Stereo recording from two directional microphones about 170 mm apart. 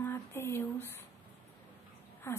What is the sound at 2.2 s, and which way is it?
Speech, 15° left (ahead or behind).